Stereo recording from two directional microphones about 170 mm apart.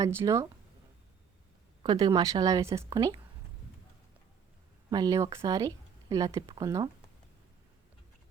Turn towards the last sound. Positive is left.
turn(degrees=-20)  # may be behind; listen again after turning